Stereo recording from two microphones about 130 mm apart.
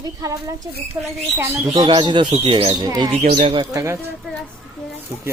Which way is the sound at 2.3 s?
50° right (ahead or behind).